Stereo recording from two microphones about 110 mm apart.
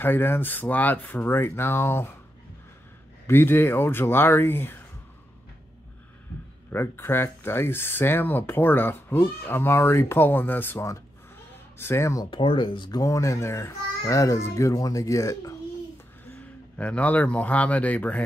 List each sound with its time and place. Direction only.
0.0 s speech: 20° left (ahead or behind)
3.3 s speech: 20° left (ahead or behind)
6.7 s speech: 20° left (ahead or behind)
12.3 s speech: 50° left (ahead or behind)
13.0 s speech: 30° left (ahead or behind)
16.3 s speech: 10° left (ahead or behind)